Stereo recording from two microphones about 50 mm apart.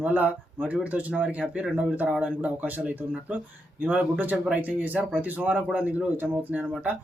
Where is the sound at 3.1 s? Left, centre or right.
Right.